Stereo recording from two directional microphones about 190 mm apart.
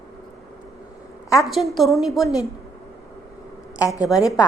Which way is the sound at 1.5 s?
Centre (ahead or behind).